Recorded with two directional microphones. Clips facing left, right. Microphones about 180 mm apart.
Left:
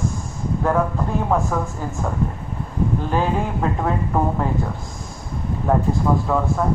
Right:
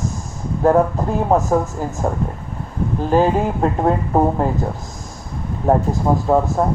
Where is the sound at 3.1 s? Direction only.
40° right (ahead or behind).